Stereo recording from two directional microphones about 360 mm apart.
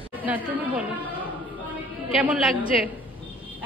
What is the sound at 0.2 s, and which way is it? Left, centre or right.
Speech, centre.